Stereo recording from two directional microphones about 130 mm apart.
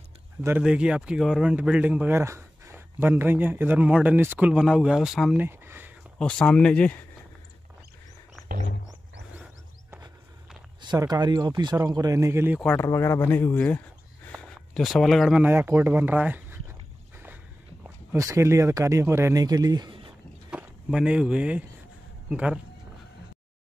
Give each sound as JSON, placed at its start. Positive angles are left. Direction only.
{"t": 0.6, "sound": "speech", "side_deg": -10}
{"t": 5.4, "sound": "a sound", "side_deg": -15}
{"t": 6.1, "sound": "speech", "side_deg": 5}
{"t": 10.8, "sound": "speech", "side_deg": -35}
{"t": 12.7, "sound": "speech", "side_deg": 20}
{"t": 14.3, "sound": "a sound", "side_deg": 0}
{"t": 15.4, "sound": "speech", "side_deg": -15}
{"t": 18.1, "sound": "speech", "side_deg": -25}
{"t": 20.4, "sound": "speech", "side_deg": -10}